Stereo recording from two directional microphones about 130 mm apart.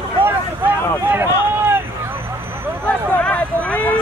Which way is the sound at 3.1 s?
10° left (ahead or behind).